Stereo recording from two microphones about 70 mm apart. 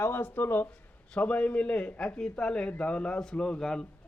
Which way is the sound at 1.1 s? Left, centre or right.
Left.